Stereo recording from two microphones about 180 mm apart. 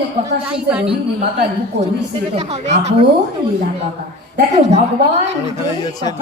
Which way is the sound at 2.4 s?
40° right (ahead or behind).